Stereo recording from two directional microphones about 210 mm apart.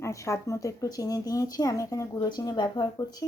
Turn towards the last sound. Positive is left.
turn(degrees=15)  # may be behind; listen again after turning